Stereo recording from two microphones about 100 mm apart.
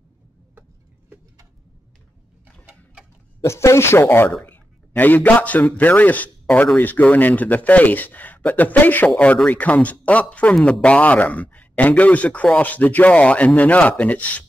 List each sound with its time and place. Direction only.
2.6 s sewing machine: 10° right (ahead or behind)
3.4 s a man's voice: 30° left (ahead or behind)